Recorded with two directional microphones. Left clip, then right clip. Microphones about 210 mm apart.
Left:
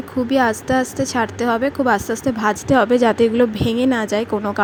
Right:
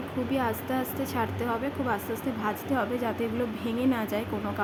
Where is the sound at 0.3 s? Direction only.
40° left (ahead or behind).